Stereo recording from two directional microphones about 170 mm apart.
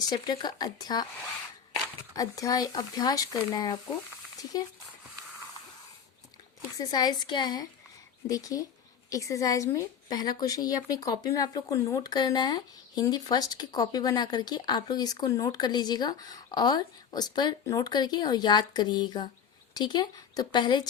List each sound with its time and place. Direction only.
0.1 s a woman's voice: 25° left (ahead or behind)
2.1 s a woman's voice: 20° left (ahead or behind)
6.7 s a woman's voice: 25° left (ahead or behind)